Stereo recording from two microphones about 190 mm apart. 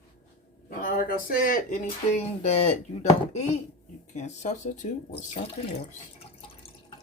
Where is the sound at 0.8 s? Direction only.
45° left (ahead or behind).